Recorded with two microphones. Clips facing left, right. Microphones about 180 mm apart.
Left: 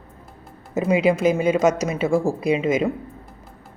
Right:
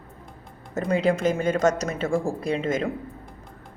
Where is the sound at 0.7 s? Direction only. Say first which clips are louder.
Left 4 dB; 5° left (ahead or behind).